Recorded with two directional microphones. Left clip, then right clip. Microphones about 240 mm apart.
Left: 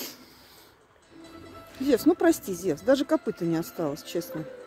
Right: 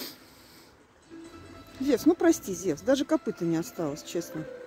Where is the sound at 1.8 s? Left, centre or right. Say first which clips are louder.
Left 2 dB; centre.